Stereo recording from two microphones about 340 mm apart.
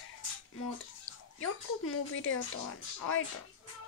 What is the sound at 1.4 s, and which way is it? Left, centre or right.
Speech, left.